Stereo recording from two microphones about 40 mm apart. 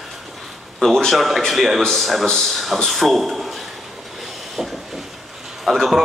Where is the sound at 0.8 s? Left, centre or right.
Centre.